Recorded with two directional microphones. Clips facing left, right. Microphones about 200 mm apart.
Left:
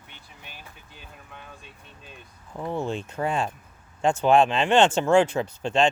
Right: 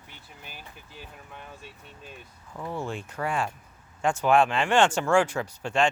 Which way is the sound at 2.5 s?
25° left (ahead or behind).